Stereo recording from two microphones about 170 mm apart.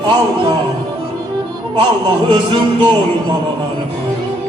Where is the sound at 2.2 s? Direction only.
30° right (ahead or behind).